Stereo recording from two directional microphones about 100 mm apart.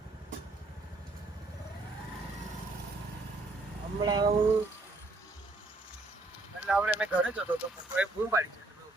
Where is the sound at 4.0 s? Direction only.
45° right (ahead or behind).